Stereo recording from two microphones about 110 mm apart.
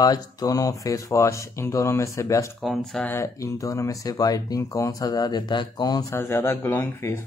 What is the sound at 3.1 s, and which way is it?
Speech, 25° left (ahead or behind).